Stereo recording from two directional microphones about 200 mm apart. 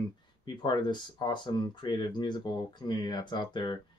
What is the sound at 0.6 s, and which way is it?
Speech, 20° left (ahead or behind).